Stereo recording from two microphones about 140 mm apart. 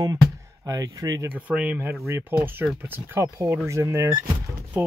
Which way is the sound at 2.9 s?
20° right (ahead or behind).